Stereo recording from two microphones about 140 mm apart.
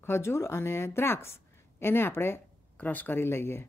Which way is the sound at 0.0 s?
20° left (ahead or behind).